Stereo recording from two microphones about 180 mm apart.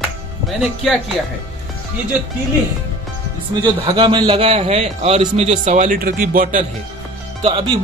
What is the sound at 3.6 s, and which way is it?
A man's voice, 25° right (ahead or behind).